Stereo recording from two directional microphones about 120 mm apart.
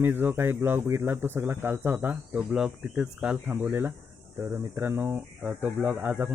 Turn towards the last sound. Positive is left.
turn(degrees=-15)  # may be behind; listen again after turning